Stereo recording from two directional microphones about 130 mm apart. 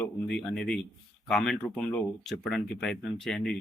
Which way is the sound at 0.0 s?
5° left (ahead or behind).